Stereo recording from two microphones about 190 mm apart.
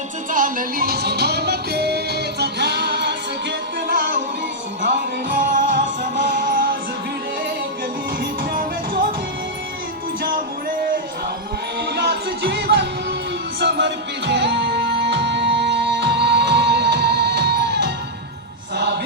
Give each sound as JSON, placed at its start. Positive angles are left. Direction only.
{"t": 0.3, "sound": "music", "side_deg": -45}
{"t": 3.8, "sound": "music", "side_deg": -50}
{"t": 5.3, "sound": "music", "side_deg": -45}
{"t": 8.2, "sound": "music", "side_deg": -50}
{"t": 11.9, "sound": "music", "side_deg": -60}